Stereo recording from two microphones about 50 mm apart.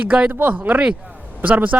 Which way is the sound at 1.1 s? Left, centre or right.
Right.